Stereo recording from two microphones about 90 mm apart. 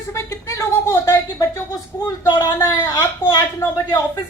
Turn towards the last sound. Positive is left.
turn(degrees=45)  # may be behind; listen again after turning